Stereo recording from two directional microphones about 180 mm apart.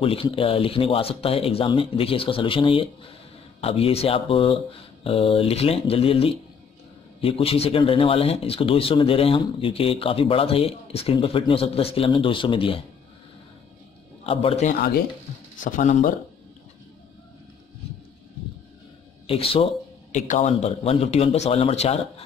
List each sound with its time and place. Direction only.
0.0 s speech: 30° left (ahead or behind)
14.2 s speech: 30° left (ahead or behind)
14.7 s speech: 60° left (ahead or behind)
15.6 s speech: 45° left (ahead or behind)
19.2 s speech: 30° left (ahead or behind)